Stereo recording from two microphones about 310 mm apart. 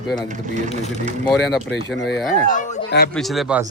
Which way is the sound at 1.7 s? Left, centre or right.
Left.